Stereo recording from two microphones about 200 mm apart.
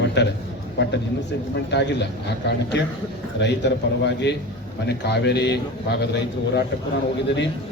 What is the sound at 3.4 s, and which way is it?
A man's voice, 60° left (ahead or behind).